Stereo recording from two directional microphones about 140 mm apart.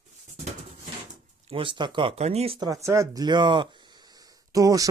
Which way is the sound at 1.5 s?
40° right (ahead or behind).